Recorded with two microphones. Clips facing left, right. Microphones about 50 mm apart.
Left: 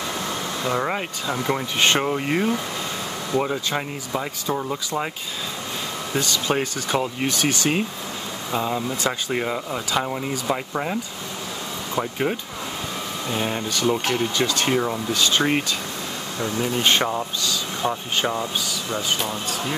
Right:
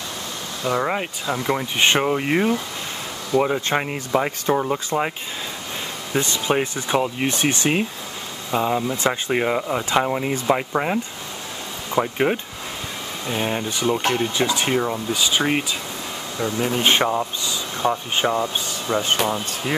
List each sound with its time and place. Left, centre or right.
0.7 s speech: centre
3.6 s speech: right
6.1 s speech: right
7.2 s speech: right; by 15.6 s centre
16.3 s speech: right
18.9 s speech: right